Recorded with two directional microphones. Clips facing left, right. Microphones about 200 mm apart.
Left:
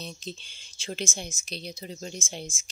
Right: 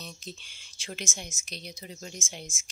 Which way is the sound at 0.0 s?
30° left (ahead or behind).